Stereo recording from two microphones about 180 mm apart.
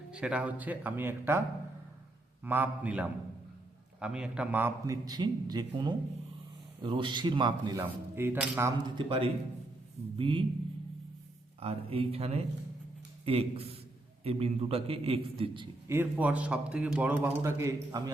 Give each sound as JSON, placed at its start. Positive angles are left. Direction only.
{"t": 0.1, "sound": "a man's voice", "side_deg": -5}
{"t": 2.4, "sound": "a man's voice", "side_deg": -10}
{"t": 7.8, "sound": "a man's voice", "side_deg": -15}
{"t": 9.0, "sound": "a man's voice", "side_deg": -30}
{"t": 11.6, "sound": "a man's voice", "side_deg": -30}
{"t": 15.9, "sound": "a man's voice", "side_deg": -10}